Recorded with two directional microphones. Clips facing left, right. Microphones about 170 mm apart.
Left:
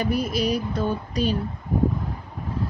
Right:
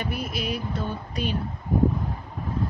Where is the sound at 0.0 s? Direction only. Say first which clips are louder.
Left 7 dB; 40° left (ahead or behind).